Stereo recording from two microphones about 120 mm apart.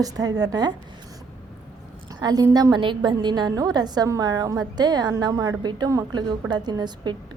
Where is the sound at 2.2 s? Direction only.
35° right (ahead or behind).